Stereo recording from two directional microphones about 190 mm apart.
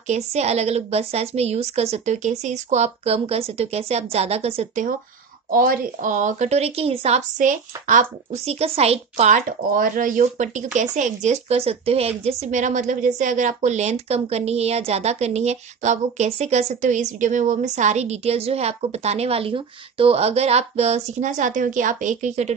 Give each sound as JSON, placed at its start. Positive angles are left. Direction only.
{"t": 0.1, "sound": "a woman's voice", "side_deg": -35}
{"t": 5.5, "sound": "a woman's voice", "side_deg": -50}